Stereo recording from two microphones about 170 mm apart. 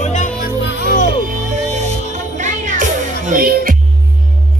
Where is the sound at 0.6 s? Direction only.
80° left.